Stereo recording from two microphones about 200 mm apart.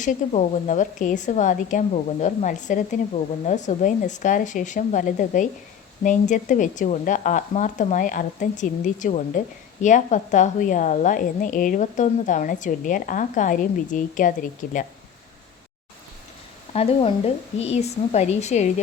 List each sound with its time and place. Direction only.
0.0 s a woman's voice: 40° left (ahead or behind)
16.7 s a woman's voice: 30° left (ahead or behind)